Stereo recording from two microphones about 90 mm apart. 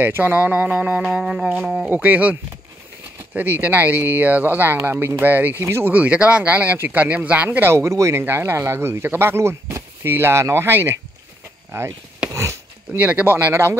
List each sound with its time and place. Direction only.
0.0 s speech: 20° right (ahead or behind)
3.3 s speech: 20° right (ahead or behind)
5.9 s speech: 15° right (ahead or behind)
12.3 s a sound: 35° right (ahead or behind)
12.9 s speech: 20° right (ahead or behind)